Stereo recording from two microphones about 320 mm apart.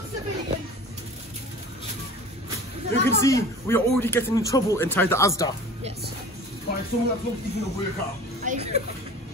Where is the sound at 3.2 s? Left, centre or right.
Centre.